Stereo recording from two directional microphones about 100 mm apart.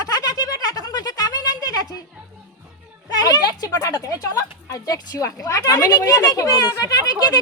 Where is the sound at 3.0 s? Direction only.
40° left (ahead or behind).